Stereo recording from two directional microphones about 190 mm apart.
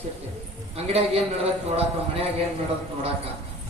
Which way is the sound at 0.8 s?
30° right (ahead or behind).